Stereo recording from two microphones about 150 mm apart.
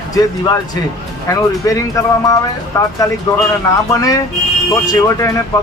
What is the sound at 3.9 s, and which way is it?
Speech, 25° left (ahead or behind).